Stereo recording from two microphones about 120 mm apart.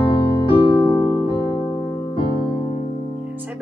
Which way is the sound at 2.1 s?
45° left (ahead or behind).